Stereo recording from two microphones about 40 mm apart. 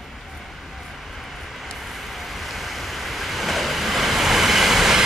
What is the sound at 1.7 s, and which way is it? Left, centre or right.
Waves, centre.